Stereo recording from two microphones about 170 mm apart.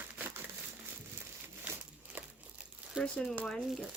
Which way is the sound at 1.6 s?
10° right (ahead or behind).